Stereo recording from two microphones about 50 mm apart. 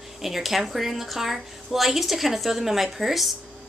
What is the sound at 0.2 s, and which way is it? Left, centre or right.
A woman's voice, centre.